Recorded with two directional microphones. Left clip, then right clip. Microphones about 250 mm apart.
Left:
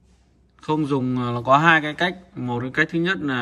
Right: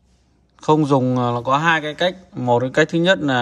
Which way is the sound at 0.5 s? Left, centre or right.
Centre.